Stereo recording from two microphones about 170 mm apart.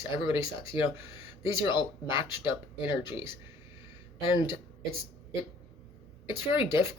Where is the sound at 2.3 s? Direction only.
15° right (ahead or behind).